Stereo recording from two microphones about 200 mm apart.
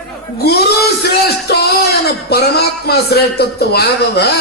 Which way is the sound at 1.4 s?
55° left (ahead or behind).